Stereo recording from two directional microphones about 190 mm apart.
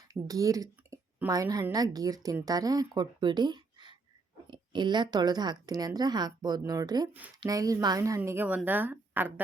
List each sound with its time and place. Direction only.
0.1 s a woman's voice: 20° right (ahead or behind)